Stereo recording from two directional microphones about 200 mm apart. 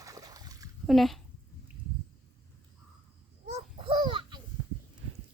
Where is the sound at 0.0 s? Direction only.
20° right (ahead or behind).